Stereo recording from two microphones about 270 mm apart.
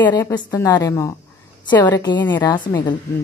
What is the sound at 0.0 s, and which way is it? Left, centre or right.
A woman's voice, centre.